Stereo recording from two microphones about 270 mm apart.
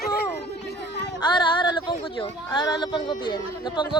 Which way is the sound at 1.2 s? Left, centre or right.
Centre.